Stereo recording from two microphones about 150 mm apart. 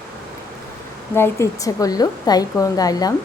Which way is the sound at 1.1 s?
15° left (ahead or behind).